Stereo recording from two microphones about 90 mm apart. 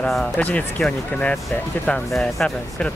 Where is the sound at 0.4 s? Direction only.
15° left (ahead or behind).